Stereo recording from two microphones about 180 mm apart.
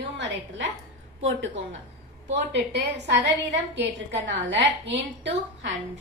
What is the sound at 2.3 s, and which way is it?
A woman's voice, 70° right (ahead or behind).